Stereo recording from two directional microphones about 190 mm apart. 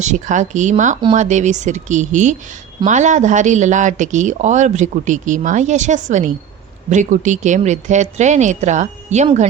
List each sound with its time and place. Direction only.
0.0 s speech: 40° right (ahead or behind)